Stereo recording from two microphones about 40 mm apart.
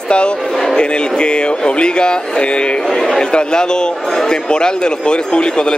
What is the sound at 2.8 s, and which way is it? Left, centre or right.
Speech, centre.